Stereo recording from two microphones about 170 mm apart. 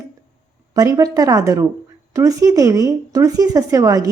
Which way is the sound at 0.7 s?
20° right (ahead or behind).